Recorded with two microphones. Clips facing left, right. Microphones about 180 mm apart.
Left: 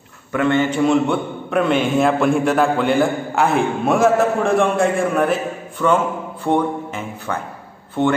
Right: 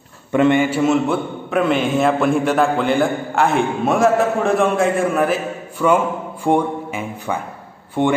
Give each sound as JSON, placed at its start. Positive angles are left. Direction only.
{"t": 0.3, "sound": "a man's voice", "side_deg": -20}
{"t": 0.6, "sound": "a man's voice", "side_deg": -5}